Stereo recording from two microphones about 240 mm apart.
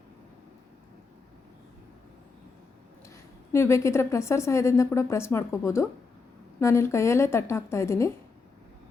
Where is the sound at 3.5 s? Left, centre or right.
Centre.